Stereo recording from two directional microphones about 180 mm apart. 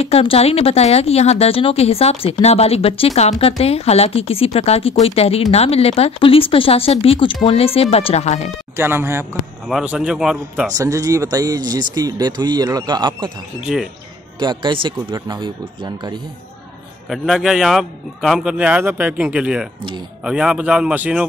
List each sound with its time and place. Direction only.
0.0 s a woman's voice: 30° left (ahead or behind)
8.7 s speech: 15° right (ahead or behind)
9.7 s a man's voice: centre (ahead or behind)
10.7 s speech: 20° right (ahead or behind)
13.7 s a man's voice: centre (ahead or behind)
14.4 s speech: 25° right (ahead or behind)
17.1 s a man's voice: centre (ahead or behind)